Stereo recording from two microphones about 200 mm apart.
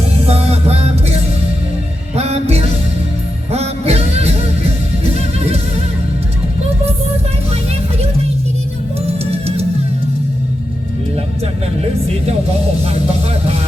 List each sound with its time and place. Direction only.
0.3 s music: 30° right (ahead or behind)
9.0 s music: 30° right (ahead or behind)